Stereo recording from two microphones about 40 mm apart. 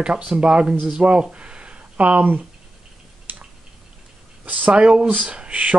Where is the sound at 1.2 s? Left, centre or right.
Right.